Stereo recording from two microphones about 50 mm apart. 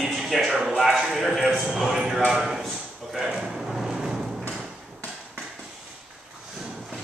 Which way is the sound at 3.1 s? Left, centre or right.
Centre.